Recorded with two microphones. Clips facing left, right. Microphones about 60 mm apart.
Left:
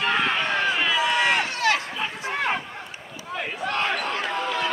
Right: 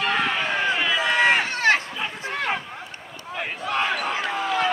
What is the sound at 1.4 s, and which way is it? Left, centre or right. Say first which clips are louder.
Run: right 3 dB; right.